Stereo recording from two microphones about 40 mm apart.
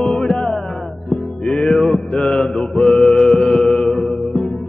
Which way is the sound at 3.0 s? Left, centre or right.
Centre.